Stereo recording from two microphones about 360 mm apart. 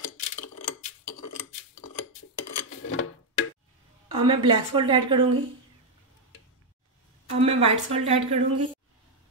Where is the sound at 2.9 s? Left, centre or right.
Left.